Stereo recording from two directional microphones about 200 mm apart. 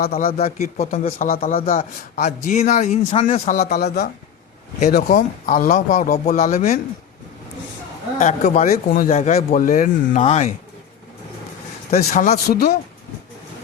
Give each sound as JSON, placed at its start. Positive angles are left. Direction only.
{"t": 0.0, "sound": "speech", "side_deg": 50}
{"t": 0.3, "sound": "a man's voice", "side_deg": 30}
{"t": 8.2, "sound": "a man's voice", "side_deg": 35}
{"t": 11.9, "sound": "a man's voice", "side_deg": 35}